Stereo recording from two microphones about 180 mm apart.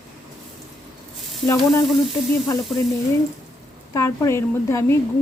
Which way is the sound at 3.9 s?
15° left (ahead or behind).